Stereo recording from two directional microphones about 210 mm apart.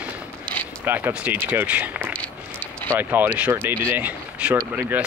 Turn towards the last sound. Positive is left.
turn(degrees=-10)  # may be behind; listen again after turning